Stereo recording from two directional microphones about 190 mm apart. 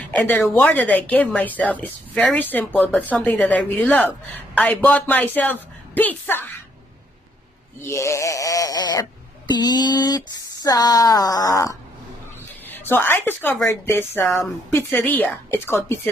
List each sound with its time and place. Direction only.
0.1 s a woman's voice: 10° left (ahead or behind)
7.8 s a woman's voice: 15° left (ahead or behind)